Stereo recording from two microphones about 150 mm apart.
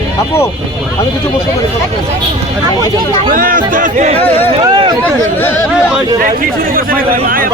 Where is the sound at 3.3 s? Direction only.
65° right (ahead or behind).